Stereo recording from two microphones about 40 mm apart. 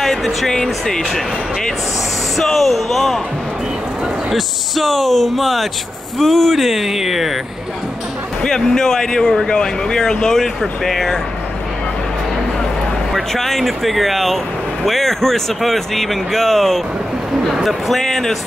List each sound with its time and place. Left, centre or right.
0.0 s speech: centre
2.3 s speech: centre
4.3 s speech: centre
8.4 s speech: centre
13.3 s speech: centre